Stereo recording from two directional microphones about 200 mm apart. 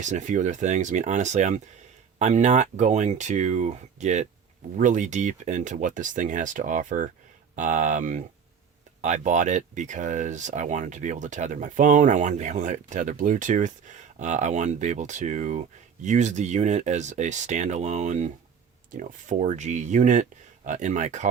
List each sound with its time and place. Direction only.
0.0 s speech: 35° right (ahead or behind)